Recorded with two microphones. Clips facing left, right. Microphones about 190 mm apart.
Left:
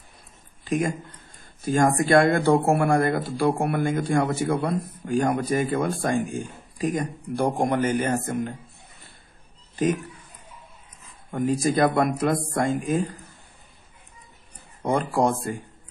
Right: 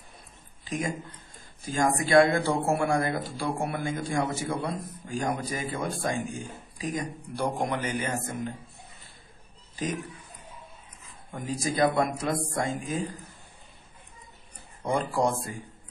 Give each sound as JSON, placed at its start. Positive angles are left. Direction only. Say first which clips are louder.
{"t": 0.7, "sound": "a man's voice", "louder": "left 6 dB", "side_deg": 55}
{"t": 9.8, "sound": "a man's voice", "louder": "left 8 dB", "side_deg": 55}
{"t": 11.3, "sound": "a man's voice", "louder": "left 7 dB", "side_deg": 60}
{"t": 14.8, "sound": "a man's voice", "louder": "left 4 dB", "side_deg": 60}